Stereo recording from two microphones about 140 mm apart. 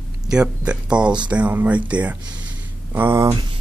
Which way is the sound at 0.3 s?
5° right (ahead or behind).